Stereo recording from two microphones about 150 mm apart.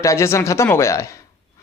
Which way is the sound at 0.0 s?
20° left (ahead or behind).